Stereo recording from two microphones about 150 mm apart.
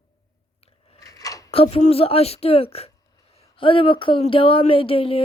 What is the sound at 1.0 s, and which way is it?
Scissors, 25° left (ahead or behind).